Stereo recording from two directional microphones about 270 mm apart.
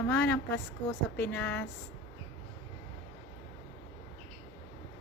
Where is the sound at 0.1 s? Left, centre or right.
Centre.